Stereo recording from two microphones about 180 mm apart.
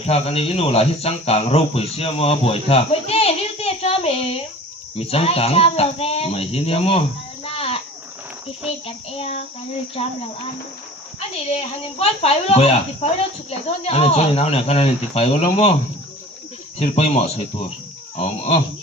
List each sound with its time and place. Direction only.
0.0 s speech: 35° left (ahead or behind)
7.4 s insect: 35° left (ahead or behind)
9.0 s speech: 35° left (ahead or behind)
11.4 s speech: 35° left (ahead or behind)
16.7 s speech: 35° left (ahead or behind)